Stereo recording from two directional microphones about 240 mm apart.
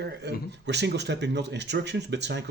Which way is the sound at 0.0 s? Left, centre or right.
Right.